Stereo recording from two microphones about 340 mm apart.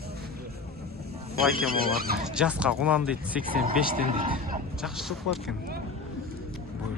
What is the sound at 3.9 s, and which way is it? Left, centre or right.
Speech, centre.